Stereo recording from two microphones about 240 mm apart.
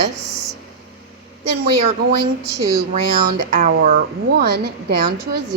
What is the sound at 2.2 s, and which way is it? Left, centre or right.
A woman's voice, right.